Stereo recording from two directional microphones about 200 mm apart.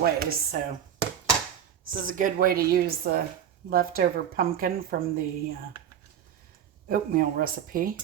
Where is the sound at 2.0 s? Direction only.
45° right (ahead or behind).